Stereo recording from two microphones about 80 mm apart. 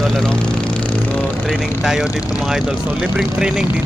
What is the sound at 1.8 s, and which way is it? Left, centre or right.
Speech, centre.